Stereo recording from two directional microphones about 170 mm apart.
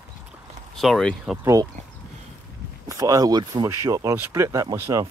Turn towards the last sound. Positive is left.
turn(degrees=-15)  # may be behind; listen again after turning